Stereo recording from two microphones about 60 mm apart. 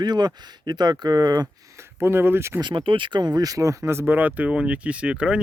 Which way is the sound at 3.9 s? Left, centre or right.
Right.